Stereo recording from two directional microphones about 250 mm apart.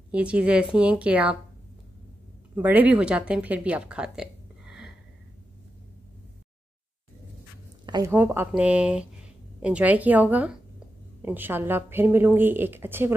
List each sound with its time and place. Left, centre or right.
0.1 s a woman's voice: centre
2.5 s speech: centre
7.8 s speech: centre